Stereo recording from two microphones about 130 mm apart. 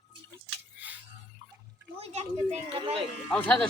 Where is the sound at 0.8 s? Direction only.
10° right (ahead or behind).